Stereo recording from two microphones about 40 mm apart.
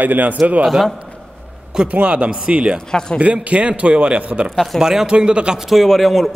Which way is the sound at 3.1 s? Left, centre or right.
Right.